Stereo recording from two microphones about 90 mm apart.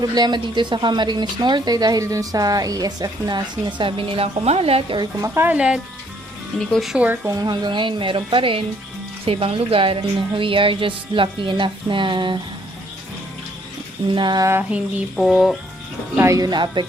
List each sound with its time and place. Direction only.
0.1 s speech: 55° right (ahead or behind)
3.8 s a woman's voice: 75° right (ahead or behind); by 4.9 s 90° right
5.2 s speech: 25° right (ahead or behind)
5.5 s speech: 10° right (ahead or behind)
6.6 s speech: 5° left (ahead or behind)
7.3 s speech: 40° right (ahead or behind)
7.5 s speech: 60° right (ahead or behind)
9.2 s a woman's voice: 90° right; by 12.4 s 65° right (ahead or behind)
14.1 s speech: 60° right (ahead or behind)
15.1 s speech: centre (ahead or behind)
16.2 s speech: 35° right (ahead or behind)
16.5 s speech: 55° right (ahead or behind)